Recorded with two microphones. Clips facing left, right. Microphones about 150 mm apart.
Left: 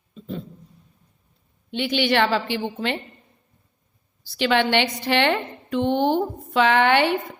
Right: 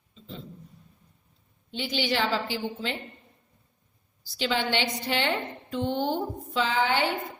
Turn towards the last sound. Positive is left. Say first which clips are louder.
# left 7 dB
turn(degrees=70)  # may be behind; listen again after turning